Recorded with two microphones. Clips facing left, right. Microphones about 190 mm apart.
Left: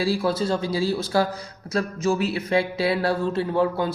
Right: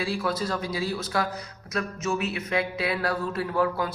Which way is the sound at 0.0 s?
35° left (ahead or behind).